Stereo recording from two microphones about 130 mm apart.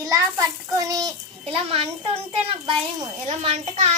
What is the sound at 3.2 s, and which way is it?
Speech, 60° right (ahead or behind).